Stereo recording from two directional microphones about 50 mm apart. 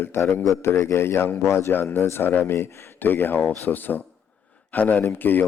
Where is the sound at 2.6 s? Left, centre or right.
Left.